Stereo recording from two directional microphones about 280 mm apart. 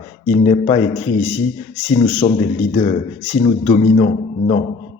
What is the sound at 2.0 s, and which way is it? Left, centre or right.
A man's voice, centre.